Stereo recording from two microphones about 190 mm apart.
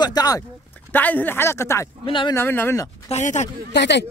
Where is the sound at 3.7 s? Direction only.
65° left (ahead or behind).